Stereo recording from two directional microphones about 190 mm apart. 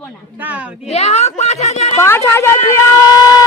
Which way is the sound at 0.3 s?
10° right (ahead or behind).